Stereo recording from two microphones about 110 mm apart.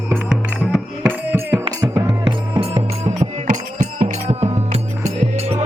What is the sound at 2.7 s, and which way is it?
Music, 80° right.